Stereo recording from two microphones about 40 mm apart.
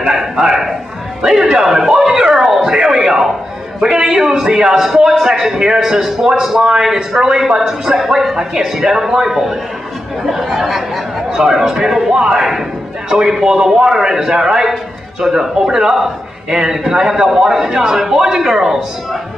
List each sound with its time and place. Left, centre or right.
0.1 s a man's voice: centre